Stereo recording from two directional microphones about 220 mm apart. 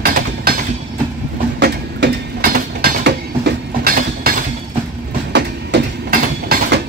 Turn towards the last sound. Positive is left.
turn(degrees=-45)  # may be behind; listen again after turning